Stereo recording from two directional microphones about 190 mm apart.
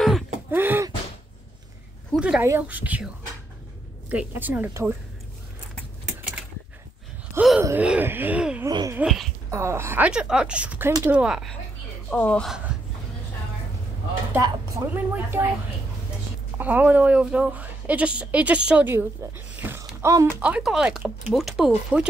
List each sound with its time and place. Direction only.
0.5 s a sound: 10° right (ahead or behind)
2.1 s speech: 5° right (ahead or behind)
4.1 s speech: 10° right (ahead or behind)
7.3 s speech: 5° right (ahead or behind)
8.6 s a sound: 20° right (ahead or behind)
9.0 s speech: centre (ahead or behind)
9.5 s speech: 15° right (ahead or behind)
12.1 s speech: 5° left (ahead or behind)
14.3 s speech: 15° right (ahead or behind)
16.5 s speech: 10° right (ahead or behind)